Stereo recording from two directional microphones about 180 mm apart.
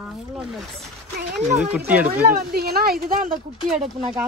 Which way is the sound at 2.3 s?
60° right (ahead or behind).